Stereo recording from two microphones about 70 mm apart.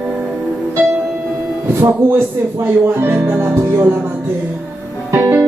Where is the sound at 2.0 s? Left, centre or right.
Right.